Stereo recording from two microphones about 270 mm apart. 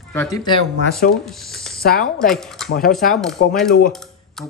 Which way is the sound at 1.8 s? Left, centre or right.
Left.